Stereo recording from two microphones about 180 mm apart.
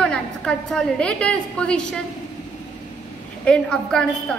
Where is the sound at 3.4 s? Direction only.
5° left (ahead or behind).